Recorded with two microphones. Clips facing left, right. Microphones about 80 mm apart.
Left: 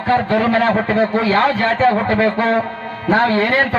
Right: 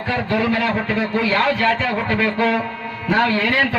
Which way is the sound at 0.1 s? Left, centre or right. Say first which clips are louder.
Left 5 dB; left.